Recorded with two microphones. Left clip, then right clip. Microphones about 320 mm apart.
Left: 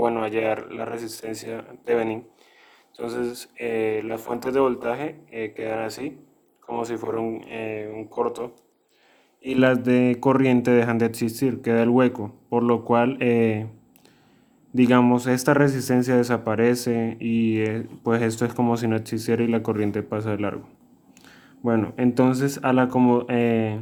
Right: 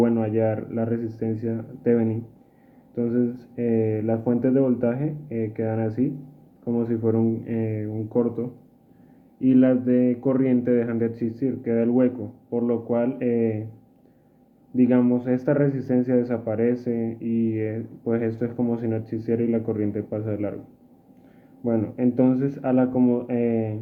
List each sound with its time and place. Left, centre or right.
0.1 s speech: left
9.5 s speech: left
14.8 s speech: left
21.6 s speech: left